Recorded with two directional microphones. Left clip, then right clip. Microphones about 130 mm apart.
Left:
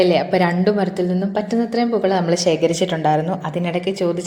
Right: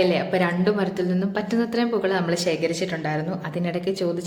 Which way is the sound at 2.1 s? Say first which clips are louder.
Left 6 dB; 30° left (ahead or behind).